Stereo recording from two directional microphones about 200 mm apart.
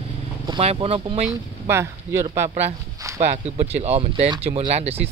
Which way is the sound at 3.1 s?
35° right (ahead or behind).